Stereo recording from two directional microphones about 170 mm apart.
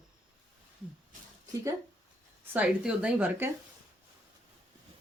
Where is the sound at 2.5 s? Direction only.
5° right (ahead or behind).